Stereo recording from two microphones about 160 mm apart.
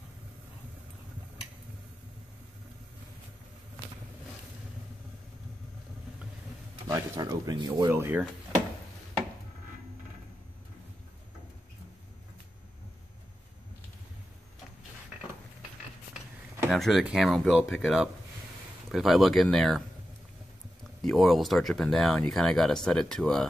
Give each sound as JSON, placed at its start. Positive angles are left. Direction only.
{"t": 6.9, "sound": "speech", "side_deg": -20}
{"t": 7.9, "sound": "speech", "side_deg": -10}
{"t": 16.6, "sound": "speech", "side_deg": 0}
{"t": 21.0, "sound": "speech", "side_deg": 0}